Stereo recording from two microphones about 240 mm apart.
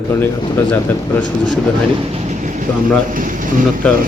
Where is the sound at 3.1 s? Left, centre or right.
Right.